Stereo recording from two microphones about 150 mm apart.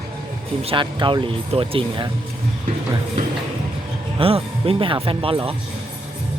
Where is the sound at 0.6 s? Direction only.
35° right (ahead or behind).